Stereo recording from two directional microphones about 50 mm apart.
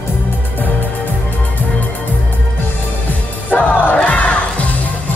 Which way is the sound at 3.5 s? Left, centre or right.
Left.